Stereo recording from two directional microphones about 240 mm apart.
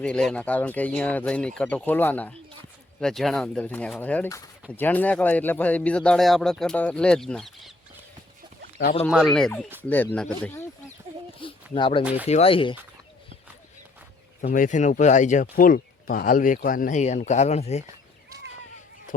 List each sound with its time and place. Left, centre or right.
0.0 s speech: centre
9.0 s speech: centre
10.4 s a sound: centre
11.3 s a sound: left
12.0 s speech: centre
12.3 s speech: left
14.4 s speech: left